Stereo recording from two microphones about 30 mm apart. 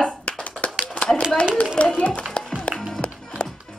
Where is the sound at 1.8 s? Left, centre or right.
Left.